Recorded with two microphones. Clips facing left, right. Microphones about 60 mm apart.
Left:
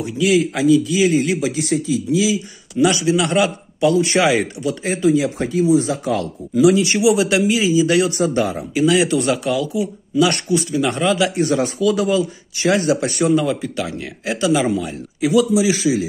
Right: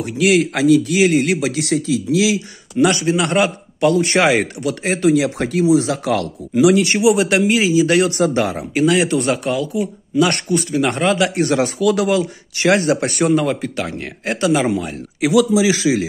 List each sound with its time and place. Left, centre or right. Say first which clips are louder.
0.0 s speech: right 1 dB; right
2.8 s speech: even; right
6.8 s speech: right 1 dB; right
7.6 s speech: right 1 dB; right
11.3 s speech: right 1 dB; right
15.1 s a man's voice: right 1 dB; right